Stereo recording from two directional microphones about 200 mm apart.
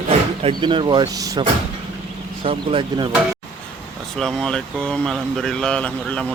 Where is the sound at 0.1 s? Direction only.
25° right (ahead or behind).